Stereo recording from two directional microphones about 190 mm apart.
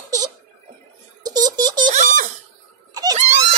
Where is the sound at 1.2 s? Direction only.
20° right (ahead or behind).